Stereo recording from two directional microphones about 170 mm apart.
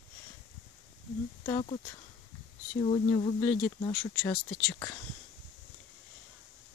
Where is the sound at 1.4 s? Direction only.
30° left (ahead or behind).